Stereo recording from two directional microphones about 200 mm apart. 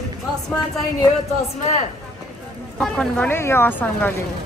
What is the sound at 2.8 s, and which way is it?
A woman's voice, 5° left (ahead or behind).